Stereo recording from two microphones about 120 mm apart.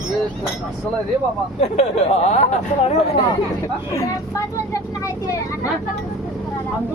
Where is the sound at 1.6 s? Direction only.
70° left (ahead or behind).